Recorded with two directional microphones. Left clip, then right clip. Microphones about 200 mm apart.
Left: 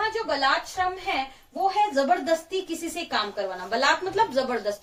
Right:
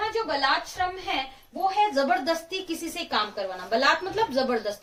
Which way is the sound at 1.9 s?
15° right (ahead or behind).